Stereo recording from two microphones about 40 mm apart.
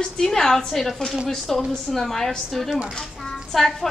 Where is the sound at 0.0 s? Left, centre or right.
Centre.